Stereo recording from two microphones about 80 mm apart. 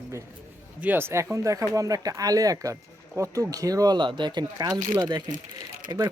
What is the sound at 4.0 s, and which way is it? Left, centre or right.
Speech, right.